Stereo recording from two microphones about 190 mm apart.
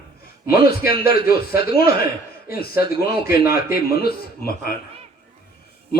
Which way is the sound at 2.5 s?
55° left (ahead or behind).